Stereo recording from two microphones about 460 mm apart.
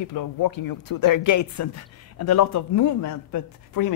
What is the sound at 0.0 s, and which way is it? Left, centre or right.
Speech, left.